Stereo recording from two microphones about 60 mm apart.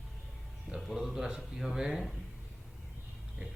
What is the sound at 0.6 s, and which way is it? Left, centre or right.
Speech, centre.